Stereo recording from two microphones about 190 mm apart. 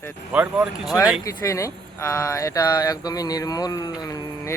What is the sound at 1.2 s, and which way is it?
Speech, 15° left (ahead or behind).